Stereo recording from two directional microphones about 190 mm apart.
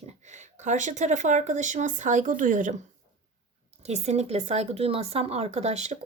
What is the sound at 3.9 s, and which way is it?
Speech, 35° right (ahead or behind).